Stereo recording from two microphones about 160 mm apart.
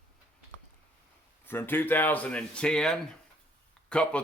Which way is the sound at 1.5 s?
10° left (ahead or behind).